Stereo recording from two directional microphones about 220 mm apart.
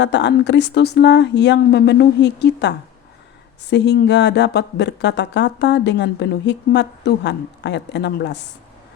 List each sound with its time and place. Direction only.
0.0 s speech: 55° left (ahead or behind)